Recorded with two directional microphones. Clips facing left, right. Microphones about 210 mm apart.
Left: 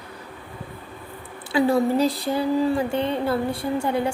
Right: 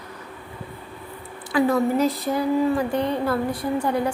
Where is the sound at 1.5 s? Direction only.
30° left (ahead or behind).